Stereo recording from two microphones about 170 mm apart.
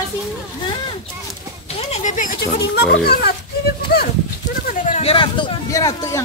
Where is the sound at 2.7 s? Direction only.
75° left (ahead or behind).